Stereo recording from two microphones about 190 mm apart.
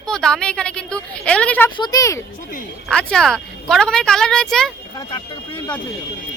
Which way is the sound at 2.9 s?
5° left (ahead or behind).